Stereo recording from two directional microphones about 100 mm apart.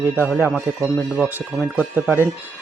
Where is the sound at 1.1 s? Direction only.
5° right (ahead or behind).